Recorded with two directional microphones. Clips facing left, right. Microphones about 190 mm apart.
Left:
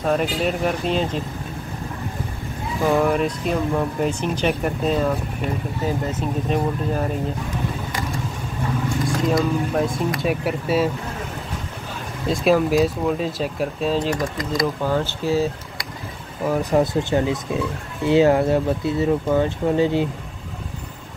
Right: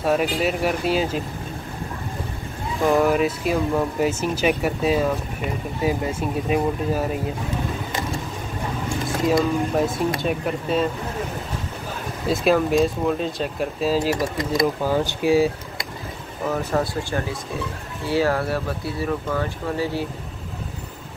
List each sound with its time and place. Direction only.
0.0 s speech: 5° right (ahead or behind)
2.8 s speech: centre (ahead or behind)
9.3 s speech: 5° right (ahead or behind)
10.2 s speech: 5° left (ahead or behind)
12.3 s speech: centre (ahead or behind)
16.4 s speech: 15° left (ahead or behind)